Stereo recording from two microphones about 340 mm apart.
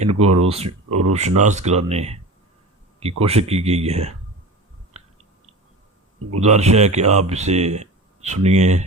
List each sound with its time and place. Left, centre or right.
0.0 s speech: centre
0.9 s a sound: right
1.4 s speech: right
6.4 s speech: centre